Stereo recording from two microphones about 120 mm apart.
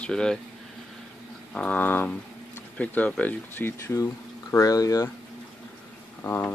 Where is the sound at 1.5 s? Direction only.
10° left (ahead or behind); by 5.0 s 30° left (ahead or behind).